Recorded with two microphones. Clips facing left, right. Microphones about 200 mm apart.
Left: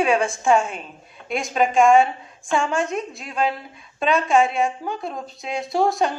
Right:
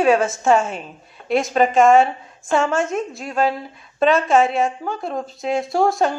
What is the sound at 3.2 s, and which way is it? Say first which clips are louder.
Speech: right 4 dB; 45° right (ahead or behind).